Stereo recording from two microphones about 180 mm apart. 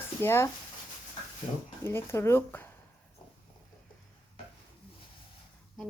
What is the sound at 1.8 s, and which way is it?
Speech, 15° left (ahead or behind).